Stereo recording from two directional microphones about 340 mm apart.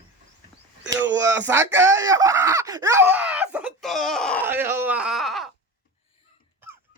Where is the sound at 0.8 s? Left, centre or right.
Centre.